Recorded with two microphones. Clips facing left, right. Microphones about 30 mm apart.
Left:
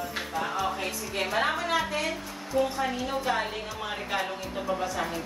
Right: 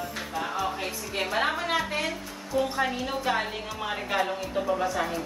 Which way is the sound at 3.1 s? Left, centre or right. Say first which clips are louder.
Right 1 dB; centre.